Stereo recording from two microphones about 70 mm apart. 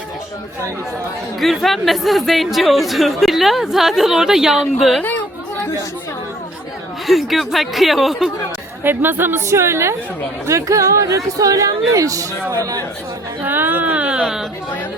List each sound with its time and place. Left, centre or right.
1.4 s speech: centre
7.1 s speech: centre
8.8 s speech: right
9.5 s speech: right
10.4 s speech: right
13.4 s speech: right; by 14.4 s centre